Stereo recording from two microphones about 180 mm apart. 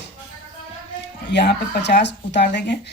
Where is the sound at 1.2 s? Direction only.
70° left (ahead or behind).